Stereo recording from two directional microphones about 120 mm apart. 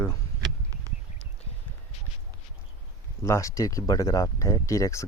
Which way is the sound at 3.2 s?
25° left (ahead or behind).